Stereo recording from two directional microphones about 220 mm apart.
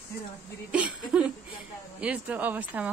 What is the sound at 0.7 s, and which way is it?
A woman's voice, 5° right (ahead or behind).